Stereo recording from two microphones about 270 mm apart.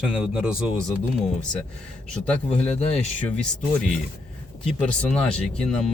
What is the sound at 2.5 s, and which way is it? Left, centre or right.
Speech, left.